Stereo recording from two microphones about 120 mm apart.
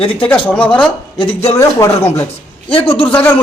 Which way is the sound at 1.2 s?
50° left (ahead or behind).